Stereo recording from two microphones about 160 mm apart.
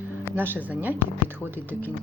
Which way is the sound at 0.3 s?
15° right (ahead or behind).